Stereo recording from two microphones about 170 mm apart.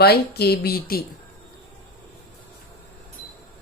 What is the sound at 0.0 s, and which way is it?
A woman's voice, 70° left (ahead or behind).